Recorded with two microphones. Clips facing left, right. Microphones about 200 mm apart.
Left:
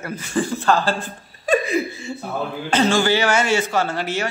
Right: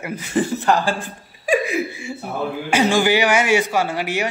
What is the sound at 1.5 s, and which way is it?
Laughter, 10° right (ahead or behind).